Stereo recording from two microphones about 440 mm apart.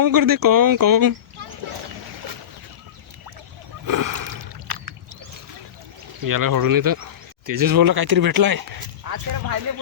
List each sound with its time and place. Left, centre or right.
0.0 s speech: right
3.8 s speech: right
6.2 s speech: right